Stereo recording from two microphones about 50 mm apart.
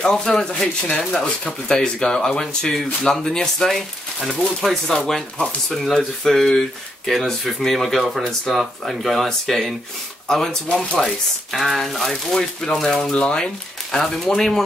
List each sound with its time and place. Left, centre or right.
0.0 s speech: centre
13.1 s speech: centre